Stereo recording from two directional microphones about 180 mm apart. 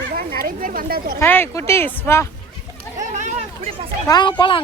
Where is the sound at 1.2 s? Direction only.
10° left (ahead or behind).